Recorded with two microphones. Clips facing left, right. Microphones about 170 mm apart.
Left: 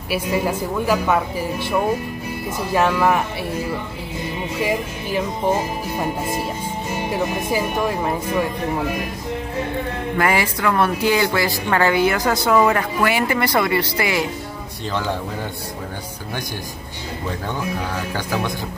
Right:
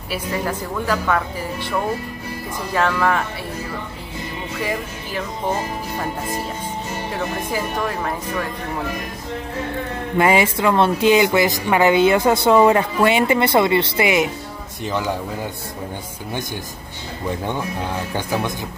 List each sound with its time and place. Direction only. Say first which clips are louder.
0.1 s speech: left 3 dB; 10° left (ahead or behind)
4.6 s speech: left 3 dB; 15° left (ahead or behind)
10.1 s speech: right 4 dB; 20° right (ahead or behind)
18.1 s speech: right 1 dB; 20° right (ahead or behind)